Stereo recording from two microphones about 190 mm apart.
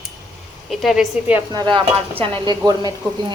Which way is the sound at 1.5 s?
25° right (ahead or behind).